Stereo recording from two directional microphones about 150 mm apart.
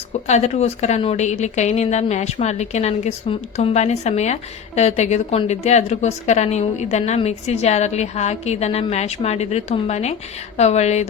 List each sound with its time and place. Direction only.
0.3 s a woman's voice: 50° left (ahead or behind)